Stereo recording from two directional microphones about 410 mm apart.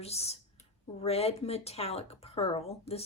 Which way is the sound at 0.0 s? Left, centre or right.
Centre.